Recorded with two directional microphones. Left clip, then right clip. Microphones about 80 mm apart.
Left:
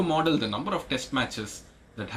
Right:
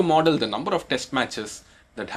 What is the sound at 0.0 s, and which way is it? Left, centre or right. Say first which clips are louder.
Speech: right 6 dB; right.